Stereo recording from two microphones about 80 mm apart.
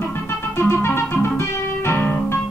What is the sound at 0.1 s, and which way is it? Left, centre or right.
Music, left.